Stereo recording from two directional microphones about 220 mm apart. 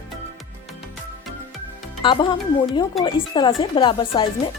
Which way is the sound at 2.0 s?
20° left (ahead or behind).